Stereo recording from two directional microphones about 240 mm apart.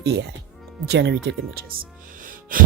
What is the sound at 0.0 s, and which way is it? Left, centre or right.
Speech, right.